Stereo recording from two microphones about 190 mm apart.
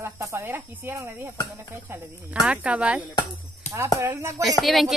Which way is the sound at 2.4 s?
5° right (ahead or behind).